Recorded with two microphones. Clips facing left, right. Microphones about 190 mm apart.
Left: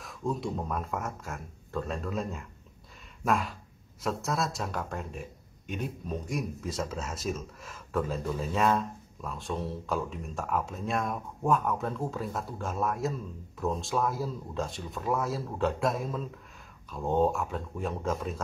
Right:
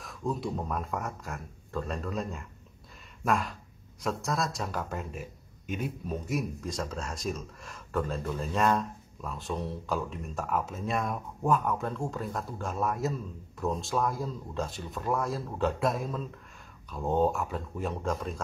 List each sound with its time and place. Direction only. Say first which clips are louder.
0.0 s a man's voice: even; centre (ahead or behind)